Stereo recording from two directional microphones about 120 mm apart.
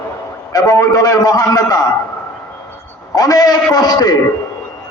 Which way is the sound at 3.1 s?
30° left (ahead or behind).